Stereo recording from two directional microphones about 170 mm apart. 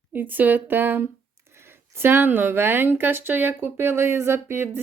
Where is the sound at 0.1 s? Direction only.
10° right (ahead or behind).